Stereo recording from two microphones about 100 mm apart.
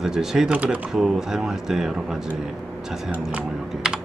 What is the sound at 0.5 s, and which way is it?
Speech, 15° right (ahead or behind).